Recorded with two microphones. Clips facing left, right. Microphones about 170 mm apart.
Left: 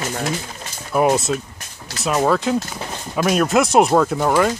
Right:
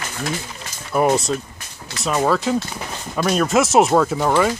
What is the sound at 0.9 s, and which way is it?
Speech, centre (ahead or behind).